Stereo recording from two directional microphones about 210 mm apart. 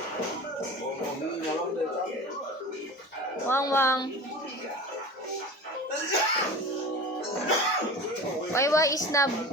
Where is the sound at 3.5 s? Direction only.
10° left (ahead or behind).